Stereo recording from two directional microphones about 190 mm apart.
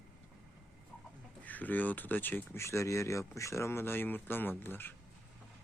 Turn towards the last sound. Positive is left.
turn(degrees=10)  # may be behind; listen again after turning